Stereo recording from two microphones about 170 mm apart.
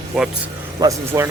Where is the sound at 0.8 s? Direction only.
15° right (ahead or behind).